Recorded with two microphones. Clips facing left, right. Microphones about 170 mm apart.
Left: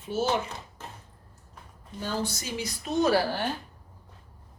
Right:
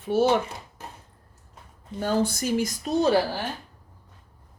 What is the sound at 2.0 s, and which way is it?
Speech, 55° right (ahead or behind).